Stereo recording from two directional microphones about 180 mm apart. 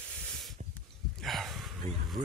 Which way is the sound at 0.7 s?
Centre (ahead or behind).